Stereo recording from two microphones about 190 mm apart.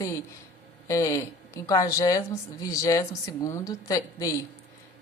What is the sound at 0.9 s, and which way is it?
Speech, 15° left (ahead or behind).